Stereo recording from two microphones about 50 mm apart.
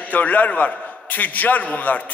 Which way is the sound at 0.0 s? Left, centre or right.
Left.